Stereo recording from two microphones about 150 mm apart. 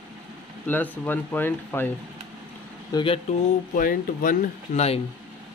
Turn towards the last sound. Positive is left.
turn(degrees=65)  # may be behind; listen again after turning